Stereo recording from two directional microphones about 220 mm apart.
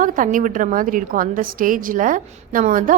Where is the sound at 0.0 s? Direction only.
35° right (ahead or behind).